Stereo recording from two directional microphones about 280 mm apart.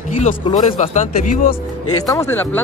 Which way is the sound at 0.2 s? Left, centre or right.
Left.